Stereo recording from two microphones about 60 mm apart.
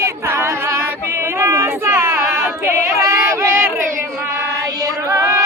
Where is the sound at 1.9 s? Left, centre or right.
Right.